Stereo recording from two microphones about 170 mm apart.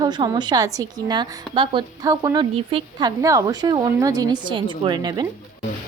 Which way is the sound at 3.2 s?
20° right (ahead or behind).